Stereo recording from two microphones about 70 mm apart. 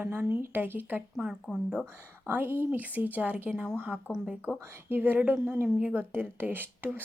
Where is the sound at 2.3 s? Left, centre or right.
Right.